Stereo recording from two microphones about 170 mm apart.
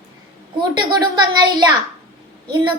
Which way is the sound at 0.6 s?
25° right (ahead or behind).